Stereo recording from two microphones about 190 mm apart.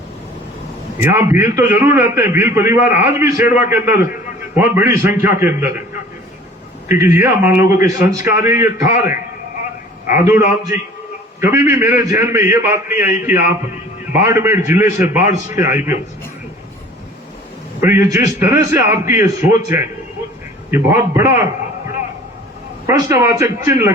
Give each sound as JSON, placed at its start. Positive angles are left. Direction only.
{"t": 1.1, "sound": "a man's voice", "side_deg": -10}
{"t": 6.8, "sound": "a man's voice", "side_deg": -15}
{"t": 10.2, "sound": "a man's voice", "side_deg": -15}
{"t": 17.7, "sound": "a man's voice", "side_deg": -15}
{"t": 20.7, "sound": "a man's voice", "side_deg": -15}
{"t": 22.9, "sound": "a man's voice", "side_deg": -15}